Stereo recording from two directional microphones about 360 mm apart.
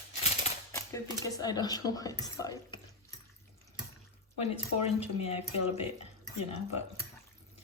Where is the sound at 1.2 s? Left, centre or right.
Centre.